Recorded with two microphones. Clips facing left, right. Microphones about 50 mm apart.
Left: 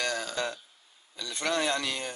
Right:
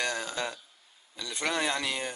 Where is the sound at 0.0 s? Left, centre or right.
Centre.